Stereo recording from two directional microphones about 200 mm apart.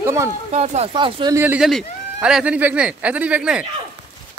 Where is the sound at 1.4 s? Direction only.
10° right (ahead or behind).